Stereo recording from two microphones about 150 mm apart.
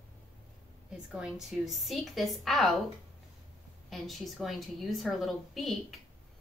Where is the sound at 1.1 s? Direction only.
Centre (ahead or behind).